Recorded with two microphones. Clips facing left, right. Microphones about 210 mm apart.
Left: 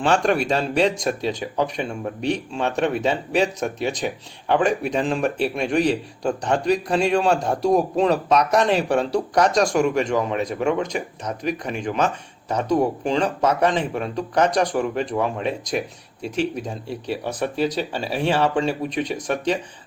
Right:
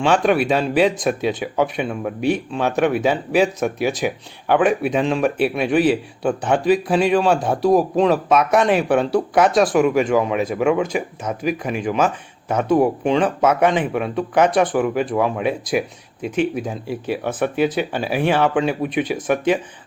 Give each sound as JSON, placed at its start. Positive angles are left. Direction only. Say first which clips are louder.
{"t": 0.0, "sound": "speech", "louder": "right 3 dB", "side_deg": 0}